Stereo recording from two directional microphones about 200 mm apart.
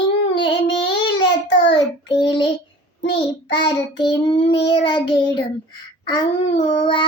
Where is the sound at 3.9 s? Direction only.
25° left (ahead or behind).